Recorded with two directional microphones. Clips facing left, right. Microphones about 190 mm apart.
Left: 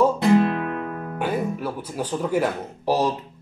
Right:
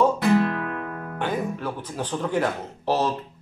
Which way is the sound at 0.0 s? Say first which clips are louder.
Left 2 dB; 20° left (ahead or behind).